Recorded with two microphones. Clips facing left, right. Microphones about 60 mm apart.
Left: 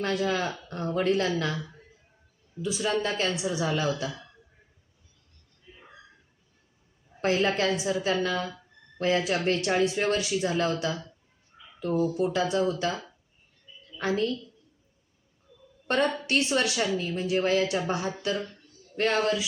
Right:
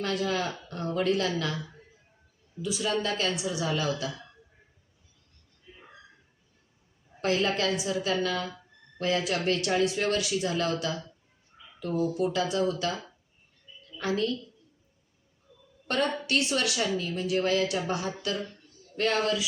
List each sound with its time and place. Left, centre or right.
0.0 s a woman's voice: left
7.2 s a woman's voice: left
14.0 s a woman's voice: left
16.2 s a woman's voice: left